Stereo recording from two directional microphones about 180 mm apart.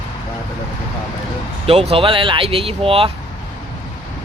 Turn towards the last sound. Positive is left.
turn(degrees=-30)  # may be behind; listen again after turning